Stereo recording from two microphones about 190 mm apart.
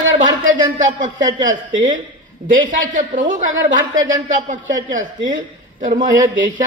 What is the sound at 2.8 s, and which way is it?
A man's voice, 45° right (ahead or behind).